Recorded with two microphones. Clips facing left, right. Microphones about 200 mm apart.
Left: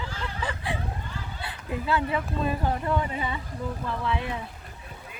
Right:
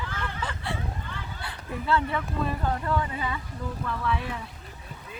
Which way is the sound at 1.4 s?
20° left (ahead or behind).